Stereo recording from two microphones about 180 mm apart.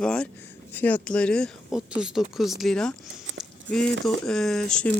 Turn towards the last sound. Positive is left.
turn(degrees=5)  # may be behind; listen again after turning